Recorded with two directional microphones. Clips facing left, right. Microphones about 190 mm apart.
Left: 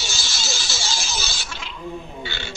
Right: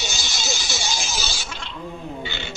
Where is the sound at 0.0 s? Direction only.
20° right (ahead or behind).